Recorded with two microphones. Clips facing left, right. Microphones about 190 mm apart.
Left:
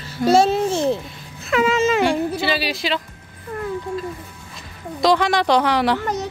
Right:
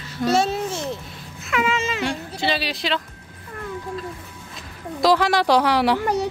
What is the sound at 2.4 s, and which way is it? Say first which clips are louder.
Speech: left 2 dB; 5° left (ahead or behind).